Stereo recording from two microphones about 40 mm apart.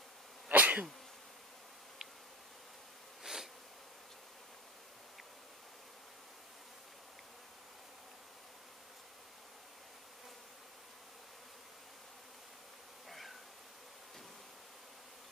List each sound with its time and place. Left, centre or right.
0.5 s sneeze: right
3.3 s insect: centre